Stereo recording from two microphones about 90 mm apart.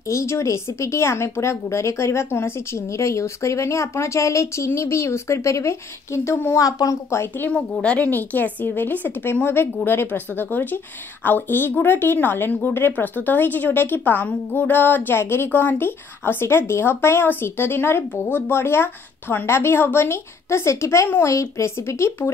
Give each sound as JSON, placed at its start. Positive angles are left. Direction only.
{"t": 0.1, "sound": "speech", "side_deg": 35}
{"t": 6.6, "sound": "a woman's voice", "side_deg": 40}
{"t": 7.8, "sound": "a woman's voice", "side_deg": 15}